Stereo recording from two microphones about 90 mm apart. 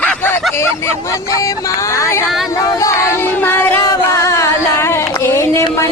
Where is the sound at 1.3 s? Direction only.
40° left (ahead or behind).